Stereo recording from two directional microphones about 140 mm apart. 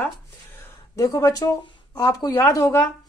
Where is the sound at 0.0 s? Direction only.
15° left (ahead or behind).